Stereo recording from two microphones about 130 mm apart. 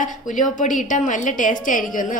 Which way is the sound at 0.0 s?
75° left (ahead or behind).